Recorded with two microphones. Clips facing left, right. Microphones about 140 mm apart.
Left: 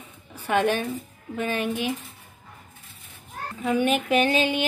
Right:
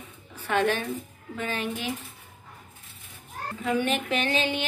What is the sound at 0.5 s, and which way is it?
Speech, 15° left (ahead or behind).